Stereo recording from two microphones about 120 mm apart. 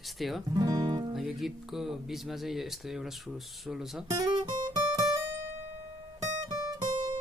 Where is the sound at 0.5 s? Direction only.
35° right (ahead or behind).